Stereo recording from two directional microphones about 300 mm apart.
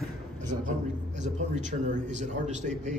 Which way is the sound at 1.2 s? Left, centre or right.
Right.